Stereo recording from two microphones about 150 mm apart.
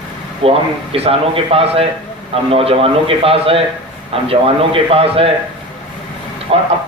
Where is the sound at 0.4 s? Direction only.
40° right (ahead or behind).